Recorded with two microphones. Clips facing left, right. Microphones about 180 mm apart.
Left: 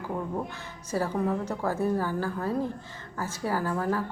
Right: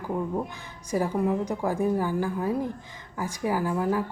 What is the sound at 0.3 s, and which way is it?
Speech, 15° right (ahead or behind).